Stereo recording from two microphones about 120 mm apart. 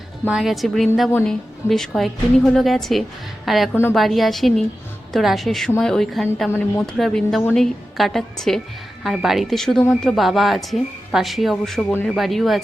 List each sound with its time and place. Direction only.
0.3 s a woman's voice: 5° right (ahead or behind)
3.7 s a woman's voice: 20° left (ahead or behind)
3.9 s speech: centre (ahead or behind)
6.5 s speech: 10° left (ahead or behind)
6.9 s speech: centre (ahead or behind)